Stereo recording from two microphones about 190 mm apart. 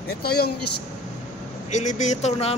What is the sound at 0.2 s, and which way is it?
Speech, 55° left (ahead or behind).